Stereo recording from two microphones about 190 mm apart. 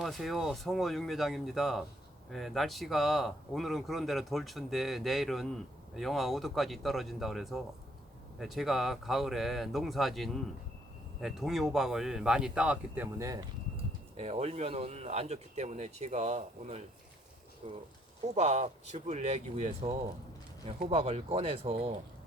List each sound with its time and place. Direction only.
0.0 s speech: centre (ahead or behind); by 13.4 s 15° right (ahead or behind)
14.2 s speech: 35° right (ahead or behind)